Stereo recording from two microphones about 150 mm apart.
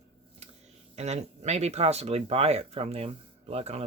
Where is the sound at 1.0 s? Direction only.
45° right (ahead or behind).